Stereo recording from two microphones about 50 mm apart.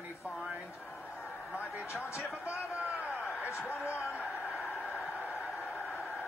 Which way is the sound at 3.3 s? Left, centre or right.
Left.